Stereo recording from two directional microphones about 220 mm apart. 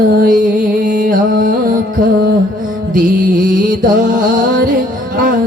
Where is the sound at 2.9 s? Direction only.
35° right (ahead or behind).